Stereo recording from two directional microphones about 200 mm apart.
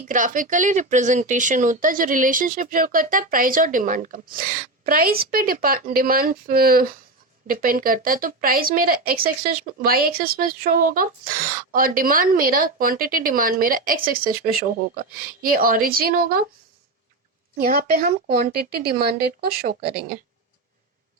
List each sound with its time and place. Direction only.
0.1 s speech: 40° right (ahead or behind)
17.6 s speech: 50° right (ahead or behind)